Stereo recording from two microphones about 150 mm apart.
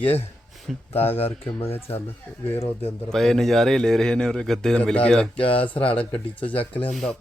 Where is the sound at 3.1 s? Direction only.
5° left (ahead or behind).